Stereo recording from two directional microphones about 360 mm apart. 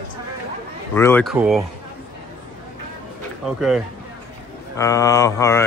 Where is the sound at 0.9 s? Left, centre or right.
Centre.